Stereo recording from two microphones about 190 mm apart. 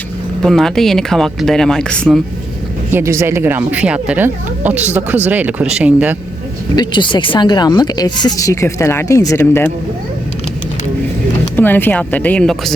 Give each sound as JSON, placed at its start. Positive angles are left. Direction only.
{"t": 0.4, "sound": "speech", "side_deg": 0}
{"t": 2.9, "sound": "speech", "side_deg": -15}
{"t": 6.7, "sound": "speech", "side_deg": 25}
{"t": 11.5, "sound": "speech", "side_deg": 10}